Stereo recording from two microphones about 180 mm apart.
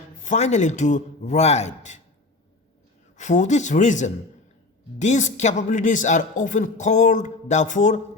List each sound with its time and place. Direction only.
0.3 s a man's voice: 40° left (ahead or behind)
3.2 s a man's voice: 40° left (ahead or behind)